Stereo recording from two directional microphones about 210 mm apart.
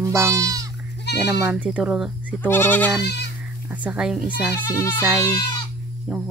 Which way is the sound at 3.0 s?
55° left (ahead or behind).